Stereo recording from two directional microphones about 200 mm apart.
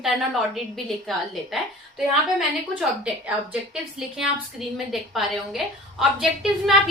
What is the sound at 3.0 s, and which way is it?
Speech, 5° right (ahead or behind).